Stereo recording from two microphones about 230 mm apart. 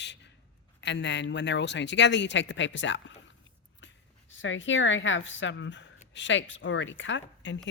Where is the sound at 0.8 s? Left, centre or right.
Left.